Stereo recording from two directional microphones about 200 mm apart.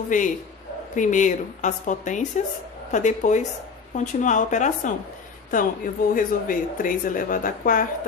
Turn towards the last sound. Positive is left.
turn(degrees=45)  # may be behind; listen again after turning